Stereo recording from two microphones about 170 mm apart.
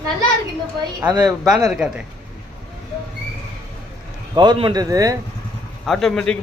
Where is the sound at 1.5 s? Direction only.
Centre (ahead or behind).